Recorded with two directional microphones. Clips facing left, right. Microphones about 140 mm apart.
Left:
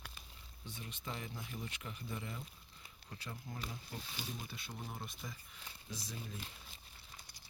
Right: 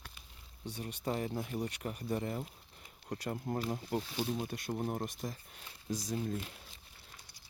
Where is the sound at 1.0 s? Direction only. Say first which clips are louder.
Right 11 dB; 40° right (ahead or behind).